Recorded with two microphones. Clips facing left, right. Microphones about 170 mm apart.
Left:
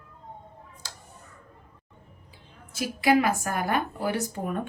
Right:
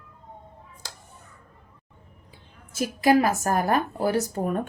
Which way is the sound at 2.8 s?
40° right (ahead or behind).